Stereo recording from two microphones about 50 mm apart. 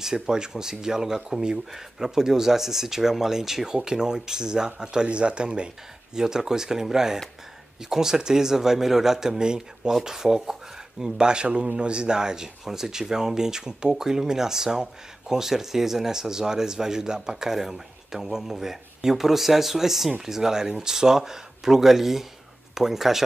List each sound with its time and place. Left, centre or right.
0.0 s speech: centre